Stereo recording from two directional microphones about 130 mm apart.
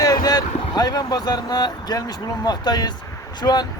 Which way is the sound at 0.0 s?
30° left (ahead or behind).